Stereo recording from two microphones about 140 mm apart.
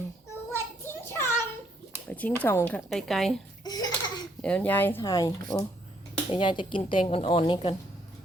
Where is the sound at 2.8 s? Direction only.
Centre (ahead or behind).